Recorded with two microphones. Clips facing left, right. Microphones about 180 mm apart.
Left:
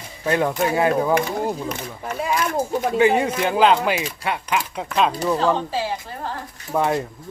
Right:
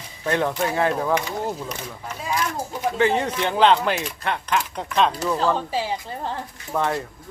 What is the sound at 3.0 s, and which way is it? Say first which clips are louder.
Speech: left 3 dB; 10° left (ahead or behind).